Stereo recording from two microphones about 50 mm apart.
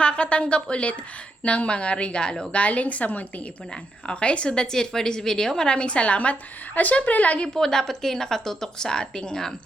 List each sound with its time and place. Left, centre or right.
0.0 s a woman's voice: left
7.4 s a woman's voice: centre